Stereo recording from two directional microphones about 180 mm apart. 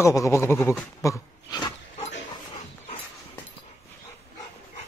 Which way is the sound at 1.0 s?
20° left (ahead or behind).